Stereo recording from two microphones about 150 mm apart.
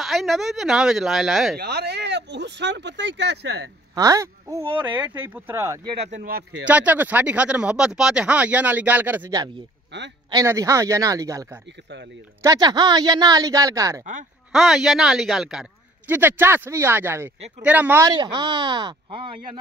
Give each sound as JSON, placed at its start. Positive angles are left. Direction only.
{"t": 0.0, "sound": "speech", "side_deg": 0}
{"t": 1.6, "sound": "speech", "side_deg": -90}
{"t": 3.9, "sound": "speech", "side_deg": -25}
{"t": 10.3, "sound": "a woman's voice", "side_deg": -20}
{"t": 14.5, "sound": "speech", "side_deg": -5}
{"t": 16.1, "sound": "speech", "side_deg": -15}
{"t": 18.0, "sound": "speech", "side_deg": -30}